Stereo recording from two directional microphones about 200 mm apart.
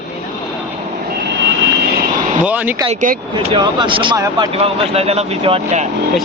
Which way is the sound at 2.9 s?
40° right (ahead or behind).